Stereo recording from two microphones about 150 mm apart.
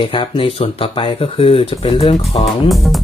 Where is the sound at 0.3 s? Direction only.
40° left (ahead or behind).